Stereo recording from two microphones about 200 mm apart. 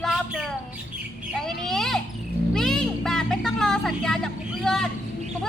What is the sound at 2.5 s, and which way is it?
Music, centre (ahead or behind).